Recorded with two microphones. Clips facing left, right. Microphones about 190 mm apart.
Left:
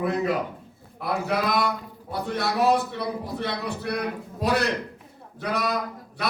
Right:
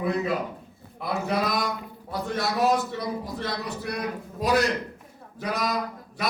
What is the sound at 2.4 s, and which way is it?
A man's voice, 60° left (ahead or behind).